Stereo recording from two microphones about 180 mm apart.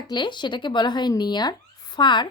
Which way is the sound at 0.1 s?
25° left (ahead or behind).